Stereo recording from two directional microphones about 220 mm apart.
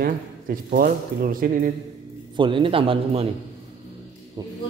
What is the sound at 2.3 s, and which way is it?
Speech, 20° right (ahead or behind).